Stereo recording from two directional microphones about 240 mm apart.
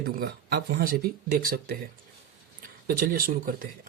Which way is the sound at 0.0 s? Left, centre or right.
Right.